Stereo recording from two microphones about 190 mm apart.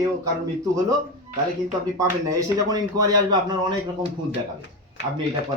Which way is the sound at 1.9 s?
15° right (ahead or behind).